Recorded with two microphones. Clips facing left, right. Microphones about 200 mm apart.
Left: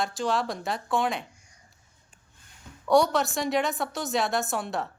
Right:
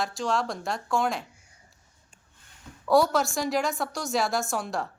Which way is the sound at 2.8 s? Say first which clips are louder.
Even; centre (ahead or behind).